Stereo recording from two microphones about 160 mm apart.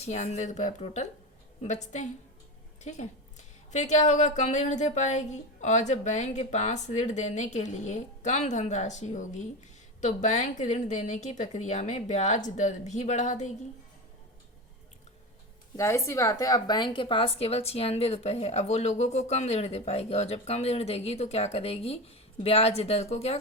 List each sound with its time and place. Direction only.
0.0 s a woman's voice: 45° left (ahead or behind)
15.7 s a woman's voice: 20° left (ahead or behind); by 23.4 s 40° left (ahead or behind)